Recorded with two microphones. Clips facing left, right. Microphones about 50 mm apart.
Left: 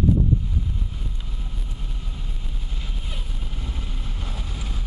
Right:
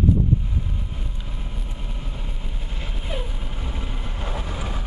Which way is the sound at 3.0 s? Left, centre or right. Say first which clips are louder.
Right 6 dB; right.